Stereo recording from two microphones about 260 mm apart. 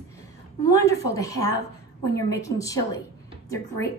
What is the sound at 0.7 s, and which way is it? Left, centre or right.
A woman's voice, centre.